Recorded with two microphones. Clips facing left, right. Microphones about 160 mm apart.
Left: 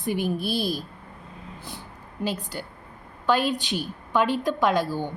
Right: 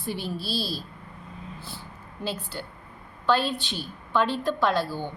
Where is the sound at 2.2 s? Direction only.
10° left (ahead or behind).